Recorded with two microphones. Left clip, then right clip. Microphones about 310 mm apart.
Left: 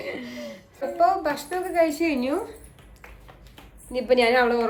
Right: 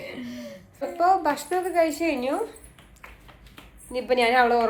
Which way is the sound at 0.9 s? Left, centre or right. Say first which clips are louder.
Even; centre.